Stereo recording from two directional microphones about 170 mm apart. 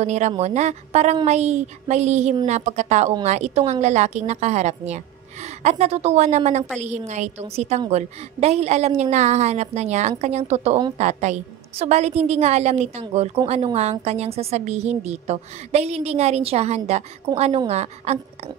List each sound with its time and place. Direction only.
0.0 s a woman's voice: 40° right (ahead or behind)